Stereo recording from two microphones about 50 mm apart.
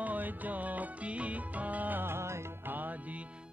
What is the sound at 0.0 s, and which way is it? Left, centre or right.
Music, right.